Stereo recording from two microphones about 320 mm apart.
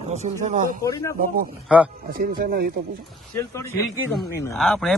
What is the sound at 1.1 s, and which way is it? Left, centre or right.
Speech, right.